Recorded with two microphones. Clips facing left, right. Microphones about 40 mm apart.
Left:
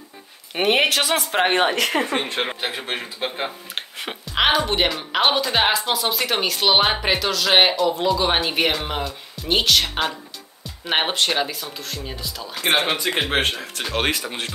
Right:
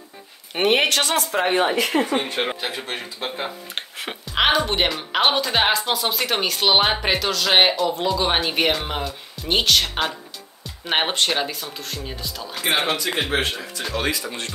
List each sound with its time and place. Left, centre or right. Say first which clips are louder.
0.6 s speech: even; centre
1.3 s speech: left 2 dB; left
2.0 s speech: right 1 dB; left
2.8 s a man's voice: left 2 dB; centre
3.7 s speech: even; centre
13.3 s speech: left 1 dB; left